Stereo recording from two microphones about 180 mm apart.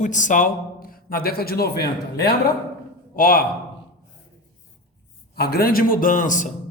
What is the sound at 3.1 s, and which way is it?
Speech, 50° left (ahead or behind).